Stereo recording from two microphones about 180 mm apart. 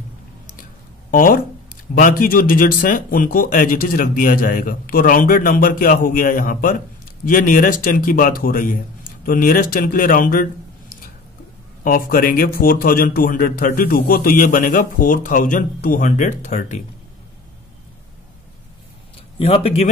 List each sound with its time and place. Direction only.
1.1 s speech: 50° left (ahead or behind)
11.8 s speech: 50° left (ahead or behind)
19.3 s a man's voice: 35° left (ahead or behind)